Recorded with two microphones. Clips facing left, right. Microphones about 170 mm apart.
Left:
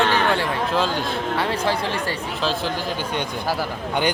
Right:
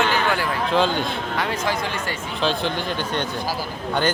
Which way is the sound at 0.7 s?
Centre (ahead or behind).